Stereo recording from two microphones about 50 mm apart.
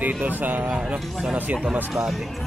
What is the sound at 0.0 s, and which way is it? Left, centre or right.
Speech, right.